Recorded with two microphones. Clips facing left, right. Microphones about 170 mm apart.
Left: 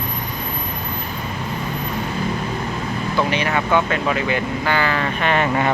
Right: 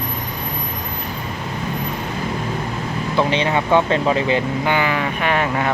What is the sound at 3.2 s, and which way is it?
Speech, 25° right (ahead or behind).